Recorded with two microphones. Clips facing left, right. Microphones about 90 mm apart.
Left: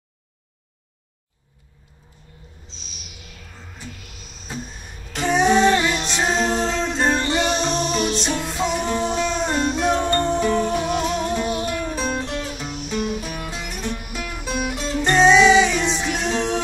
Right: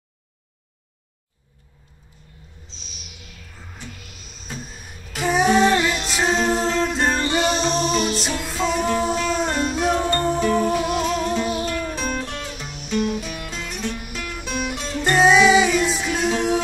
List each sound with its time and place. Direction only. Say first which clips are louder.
5.1 s music: left 1 dB; 5° right (ahead or behind)
12.3 s music: left 4 dB; 15° left (ahead or behind)
13.2 s music: left 1 dB; 45° left (ahead or behind)
13.5 s music: even; 10° left (ahead or behind)
14.8 s music: left 1 dB; 5° right (ahead or behind)